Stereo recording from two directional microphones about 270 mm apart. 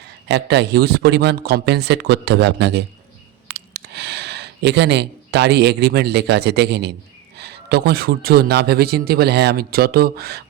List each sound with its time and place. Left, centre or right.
0.3 s a man's voice: right